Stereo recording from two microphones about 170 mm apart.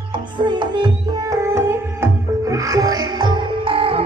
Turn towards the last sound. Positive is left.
turn(degrees=-30)  # may be behind; listen again after turning